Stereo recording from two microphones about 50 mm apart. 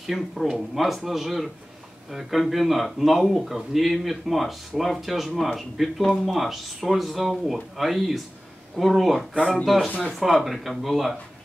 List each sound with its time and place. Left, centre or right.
0.0 s speech: centre
9.8 s speech: left
10.1 s speech: centre